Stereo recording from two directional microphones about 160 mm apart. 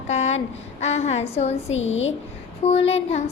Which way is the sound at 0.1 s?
45° left (ahead or behind).